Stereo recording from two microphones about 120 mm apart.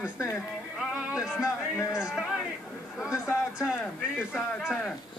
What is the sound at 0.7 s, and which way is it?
Music, 5° right (ahead or behind).